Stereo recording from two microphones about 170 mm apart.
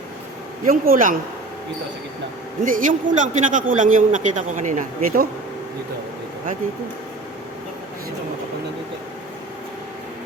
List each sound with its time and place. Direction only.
0.6 s speech: 55° right (ahead or behind)
2.6 s a man's voice: 50° right (ahead or behind)